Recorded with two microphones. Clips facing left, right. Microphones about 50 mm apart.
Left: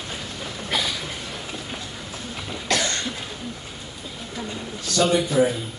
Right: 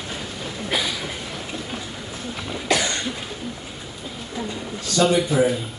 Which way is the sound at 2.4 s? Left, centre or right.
Centre.